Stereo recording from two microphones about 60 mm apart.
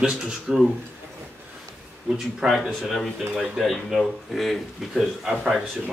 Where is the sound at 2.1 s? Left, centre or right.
Centre.